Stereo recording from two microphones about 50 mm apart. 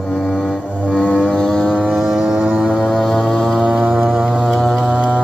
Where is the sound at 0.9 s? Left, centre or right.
Left.